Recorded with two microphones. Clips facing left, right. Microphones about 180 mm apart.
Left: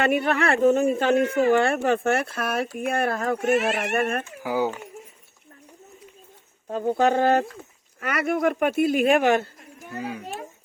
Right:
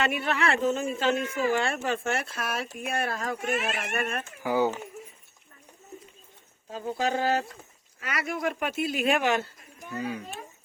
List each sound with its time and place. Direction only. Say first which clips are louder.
0.0 s speech: left 5 dB; 55° left (ahead or behind)
3.3 s speech: left 8 dB; 75° left (ahead or behind); by 4.3 s 55° left (ahead or behind)
4.4 s speech: even; 10° left (ahead or behind)
6.7 s speech: left 8 dB; 55° left (ahead or behind)
10.0 s speech: even; 10° left (ahead or behind)